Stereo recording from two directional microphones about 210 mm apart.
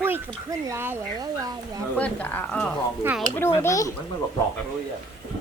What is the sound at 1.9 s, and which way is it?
Speech, 5° left (ahead or behind).